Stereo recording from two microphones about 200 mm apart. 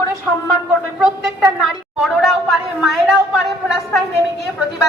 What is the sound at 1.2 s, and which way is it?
A woman's voice, centre (ahead or behind).